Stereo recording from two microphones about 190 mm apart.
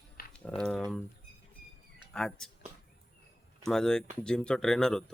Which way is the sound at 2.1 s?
5° left (ahead or behind).